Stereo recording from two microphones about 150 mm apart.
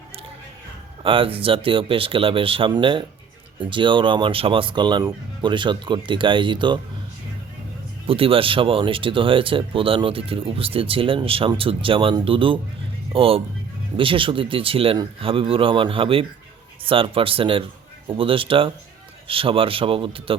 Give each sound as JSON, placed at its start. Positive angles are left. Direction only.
{"t": 1.0, "sound": "speech", "side_deg": -35}
{"t": 8.0, "sound": "speech", "side_deg": -40}